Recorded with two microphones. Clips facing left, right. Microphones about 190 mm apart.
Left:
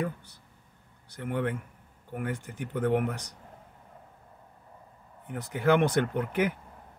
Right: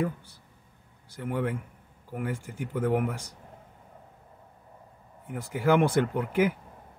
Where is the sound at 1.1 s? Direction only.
15° right (ahead or behind).